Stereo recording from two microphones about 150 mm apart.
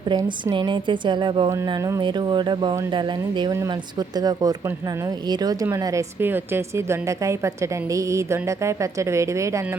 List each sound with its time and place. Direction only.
0.1 s a woman's voice: 20° right (ahead or behind)
0.5 s a woman's voice: 30° right (ahead or behind)